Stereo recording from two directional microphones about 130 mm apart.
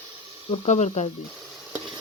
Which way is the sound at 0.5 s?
55° left (ahead or behind).